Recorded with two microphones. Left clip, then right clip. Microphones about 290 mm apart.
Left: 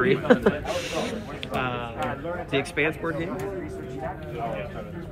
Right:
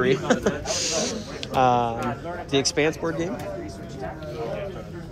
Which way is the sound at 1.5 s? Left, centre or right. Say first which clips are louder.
Right 10 dB; centre.